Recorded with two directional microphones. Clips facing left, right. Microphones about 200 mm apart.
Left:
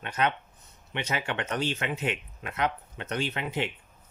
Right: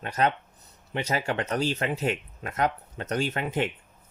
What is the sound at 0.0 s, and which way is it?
Speech, 40° right (ahead or behind).